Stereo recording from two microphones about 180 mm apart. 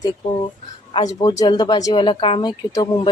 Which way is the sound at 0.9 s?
25° left (ahead or behind).